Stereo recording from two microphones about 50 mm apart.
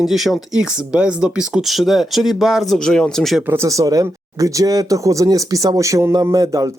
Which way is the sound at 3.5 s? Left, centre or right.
Right.